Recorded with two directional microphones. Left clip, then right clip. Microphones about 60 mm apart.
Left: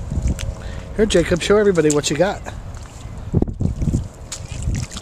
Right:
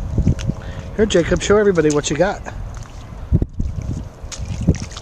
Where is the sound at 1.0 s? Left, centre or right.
Centre.